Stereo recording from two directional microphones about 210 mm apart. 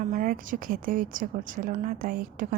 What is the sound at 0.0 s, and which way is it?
A woman's voice, 40° right (ahead or behind).